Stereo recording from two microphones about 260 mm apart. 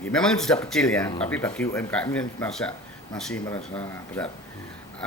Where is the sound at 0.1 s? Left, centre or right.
Centre.